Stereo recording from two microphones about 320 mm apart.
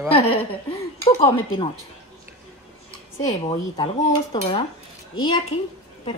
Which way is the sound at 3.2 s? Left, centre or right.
Centre.